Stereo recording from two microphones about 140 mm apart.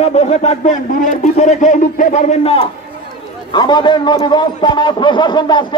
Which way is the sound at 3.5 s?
30° left (ahead or behind).